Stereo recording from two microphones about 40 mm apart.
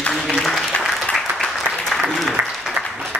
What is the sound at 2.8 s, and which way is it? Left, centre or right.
Applause, centre.